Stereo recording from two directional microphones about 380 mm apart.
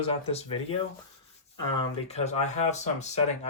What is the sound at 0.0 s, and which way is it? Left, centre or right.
Speech, centre.